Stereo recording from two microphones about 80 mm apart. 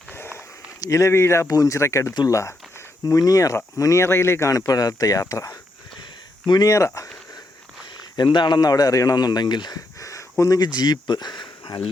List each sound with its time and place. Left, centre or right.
0.1 s a sound: left
0.8 s speech: left
1.5 s speech: left
3.1 s speech: left
4.5 s speech: left
6.4 s speech: left
8.1 s speech: left
10.0 s a sound: left
10.8 s speech: left